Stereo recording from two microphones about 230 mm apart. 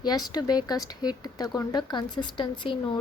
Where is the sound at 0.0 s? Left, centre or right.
Centre.